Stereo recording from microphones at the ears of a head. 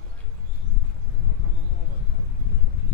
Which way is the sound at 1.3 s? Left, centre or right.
Left.